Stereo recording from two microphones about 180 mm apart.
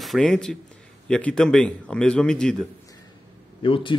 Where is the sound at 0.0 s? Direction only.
Centre (ahead or behind).